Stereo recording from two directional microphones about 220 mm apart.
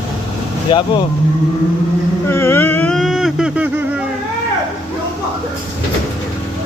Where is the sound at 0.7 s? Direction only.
20° left (ahead or behind).